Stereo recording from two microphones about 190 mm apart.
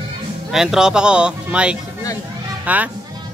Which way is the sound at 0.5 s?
5° right (ahead or behind).